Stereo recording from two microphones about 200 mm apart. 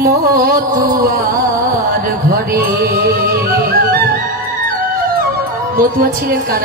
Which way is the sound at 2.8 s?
50° right (ahead or behind).